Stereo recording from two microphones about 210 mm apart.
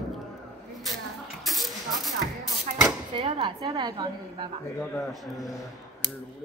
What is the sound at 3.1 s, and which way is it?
Speech, 25° right (ahead or behind).